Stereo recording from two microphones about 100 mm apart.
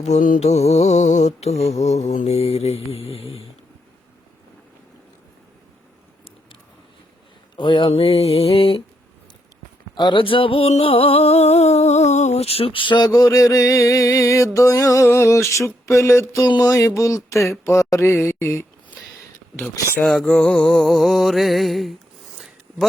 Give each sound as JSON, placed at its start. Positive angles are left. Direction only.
{"t": 0.0, "sound": "mantra", "side_deg": 90}
{"t": 7.5, "sound": "a sound", "side_deg": 55}
{"t": 7.9, "sound": "music", "side_deg": 75}
{"t": 9.9, "sound": "a sound", "side_deg": 50}
{"t": 16.6, "sound": "speech", "side_deg": 30}
{"t": 20.0, "sound": "music", "side_deg": 5}